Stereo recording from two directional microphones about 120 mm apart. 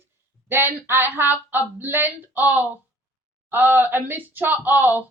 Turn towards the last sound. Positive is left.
turn(degrees=-15)  # may be behind; listen again after turning